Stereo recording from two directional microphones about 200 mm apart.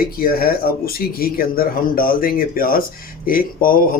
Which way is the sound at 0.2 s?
50° left (ahead or behind).